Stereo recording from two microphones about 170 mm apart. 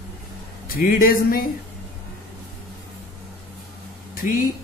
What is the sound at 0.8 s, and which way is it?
Speech, 60° left (ahead or behind).